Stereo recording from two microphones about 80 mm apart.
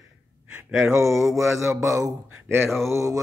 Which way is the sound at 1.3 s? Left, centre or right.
Right.